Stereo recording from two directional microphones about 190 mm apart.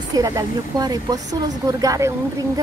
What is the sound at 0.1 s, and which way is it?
A woman's voice, 20° right (ahead or behind).